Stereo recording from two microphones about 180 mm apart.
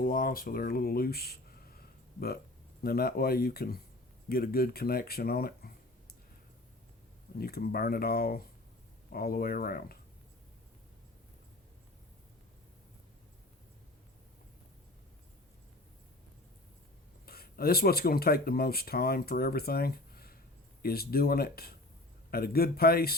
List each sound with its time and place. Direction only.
0.0 s speech: 55° left (ahead or behind)
2.8 s speech: 55° left (ahead or behind)
7.3 s speech: 60° left (ahead or behind)
17.2 s speech: 55° left (ahead or behind)